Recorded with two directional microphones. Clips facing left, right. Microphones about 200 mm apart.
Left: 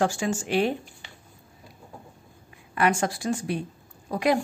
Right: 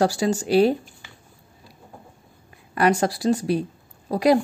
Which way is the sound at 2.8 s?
35° right (ahead or behind).